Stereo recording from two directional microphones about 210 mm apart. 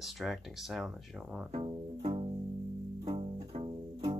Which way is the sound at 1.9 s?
25° right (ahead or behind).